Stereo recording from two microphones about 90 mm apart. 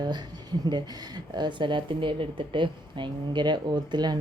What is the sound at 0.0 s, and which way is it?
Speech, 55° right (ahead or behind).